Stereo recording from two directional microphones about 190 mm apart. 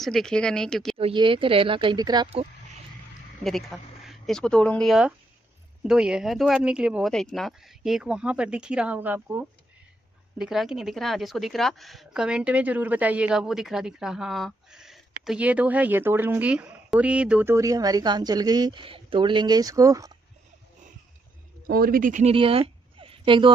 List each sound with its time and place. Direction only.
0.0 s speech: centre (ahead or behind)
0.9 s speech: 30° right (ahead or behind)
3.4 s a woman's voice: centre (ahead or behind); by 20.1 s 15° right (ahead or behind)
21.6 s speech: 50° right (ahead or behind)
22.3 s a sound: 30° right (ahead or behind)